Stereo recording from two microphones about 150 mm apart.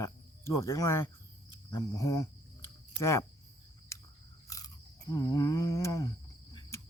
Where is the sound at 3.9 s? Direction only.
20° left (ahead or behind).